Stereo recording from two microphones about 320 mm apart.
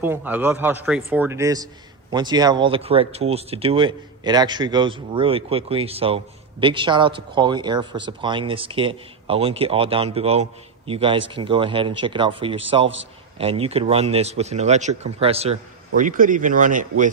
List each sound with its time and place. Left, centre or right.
0.0 s a man's voice: centre; by 16.8 s right